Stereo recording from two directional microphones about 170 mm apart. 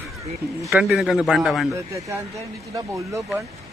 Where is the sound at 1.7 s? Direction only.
15° right (ahead or behind).